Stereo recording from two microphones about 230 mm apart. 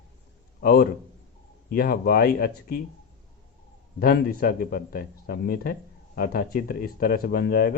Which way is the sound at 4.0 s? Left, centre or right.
Left.